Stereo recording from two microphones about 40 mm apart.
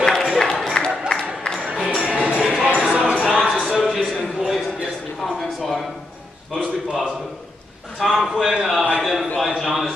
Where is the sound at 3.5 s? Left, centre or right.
Centre.